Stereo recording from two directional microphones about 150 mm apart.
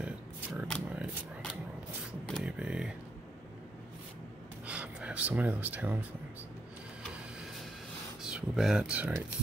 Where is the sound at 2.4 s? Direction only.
5° right (ahead or behind).